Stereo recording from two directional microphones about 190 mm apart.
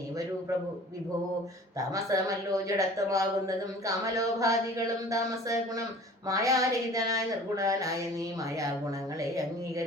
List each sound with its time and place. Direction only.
1.9 s speech: 15° right (ahead or behind)